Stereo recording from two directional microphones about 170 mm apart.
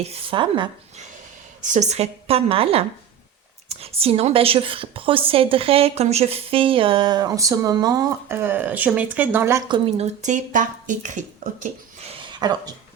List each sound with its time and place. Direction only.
0.0 s a woman's voice: 35° right (ahead or behind)
1.6 s a woman's voice: 45° right (ahead or behind); by 9.6 s 15° right (ahead or behind)
9.6 s speech: 25° right (ahead or behind)
10.0 s speech: 45° right (ahead or behind)
11.6 s a sound: 40° right (ahead or behind)